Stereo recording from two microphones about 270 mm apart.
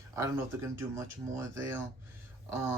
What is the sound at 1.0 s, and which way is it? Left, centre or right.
Speech, centre.